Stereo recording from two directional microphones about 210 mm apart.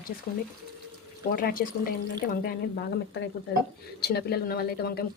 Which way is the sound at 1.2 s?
45° left (ahead or behind).